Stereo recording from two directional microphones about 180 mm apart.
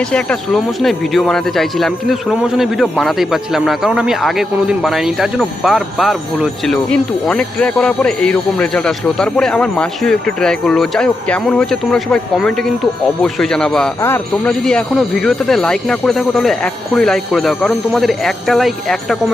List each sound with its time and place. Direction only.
0.1 s speech: 5° left (ahead or behind)